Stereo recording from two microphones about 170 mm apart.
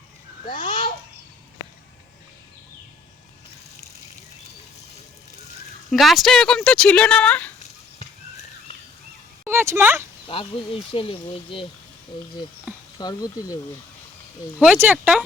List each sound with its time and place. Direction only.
0.4 s babbling: 30° left (ahead or behind)
5.9 s speech: centre (ahead or behind)
7.6 s a sound: 40° left (ahead or behind)
9.4 s a sound: 15° right (ahead or behind)
10.2 s speech: 30° left (ahead or behind)
13.0 s speech: 20° left (ahead or behind)
14.6 s speech: 10° right (ahead or behind)